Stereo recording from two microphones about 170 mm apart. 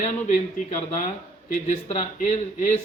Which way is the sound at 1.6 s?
40° left (ahead or behind).